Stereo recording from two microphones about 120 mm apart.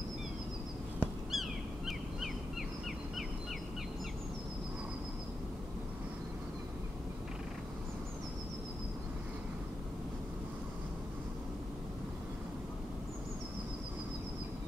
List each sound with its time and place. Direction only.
1.3 s bird: centre (ahead or behind)